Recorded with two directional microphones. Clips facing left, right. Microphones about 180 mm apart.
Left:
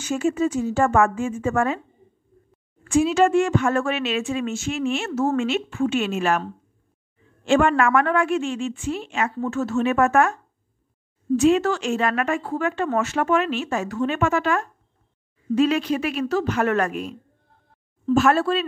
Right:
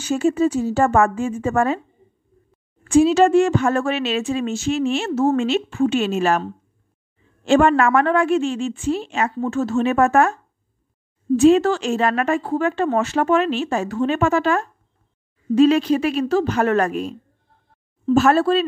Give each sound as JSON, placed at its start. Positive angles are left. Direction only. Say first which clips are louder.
{"t": 0.0, "sound": "speech", "louder": "right 4 dB", "side_deg": -35}
{"t": 2.8, "sound": "speech", "louder": "right 4 dB", "side_deg": -30}
{"t": 18.1, "sound": "speech", "louder": "right 3 dB", "side_deg": -35}